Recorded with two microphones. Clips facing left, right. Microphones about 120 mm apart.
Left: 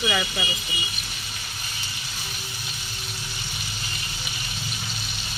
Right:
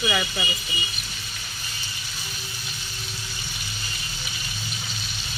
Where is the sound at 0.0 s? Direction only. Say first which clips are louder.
Even; centre (ahead or behind).